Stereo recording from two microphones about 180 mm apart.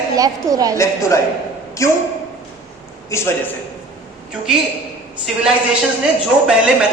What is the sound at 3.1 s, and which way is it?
Speech, 15° left (ahead or behind).